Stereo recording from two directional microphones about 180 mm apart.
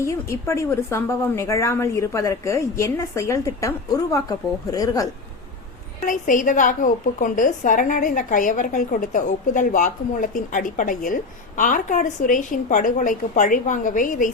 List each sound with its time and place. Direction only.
0.0 s a woman's voice: 15° left (ahead or behind)
6.1 s a woman's voice: 45° left (ahead or behind)